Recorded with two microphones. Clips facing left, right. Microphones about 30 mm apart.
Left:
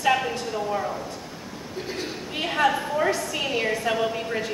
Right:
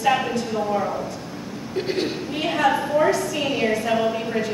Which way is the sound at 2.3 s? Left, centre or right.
Centre.